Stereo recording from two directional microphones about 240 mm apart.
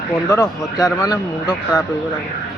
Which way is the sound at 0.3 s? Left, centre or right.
Centre.